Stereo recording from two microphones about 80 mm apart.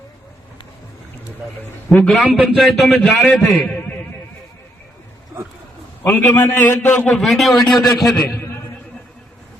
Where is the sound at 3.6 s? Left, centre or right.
Left.